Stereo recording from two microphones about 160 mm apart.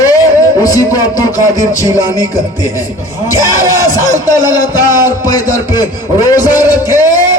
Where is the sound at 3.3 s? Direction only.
20° left (ahead or behind).